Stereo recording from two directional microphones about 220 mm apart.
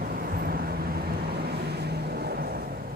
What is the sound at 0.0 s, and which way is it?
Vehicle, 40° right (ahead or behind).